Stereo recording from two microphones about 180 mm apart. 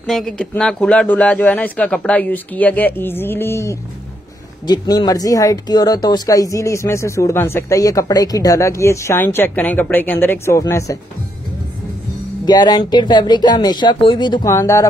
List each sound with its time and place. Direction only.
0.0 s speech: 5° left (ahead or behind)
12.4 s speech: 25° left (ahead or behind)